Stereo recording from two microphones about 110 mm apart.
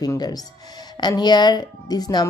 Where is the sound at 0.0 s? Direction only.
35° left (ahead or behind).